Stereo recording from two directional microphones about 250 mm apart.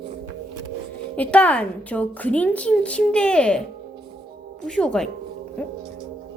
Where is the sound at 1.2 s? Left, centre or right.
Centre.